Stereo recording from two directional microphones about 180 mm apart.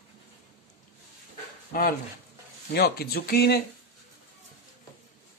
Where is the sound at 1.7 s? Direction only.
55° left (ahead or behind).